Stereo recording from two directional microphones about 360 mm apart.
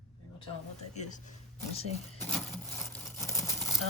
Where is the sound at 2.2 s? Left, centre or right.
Centre.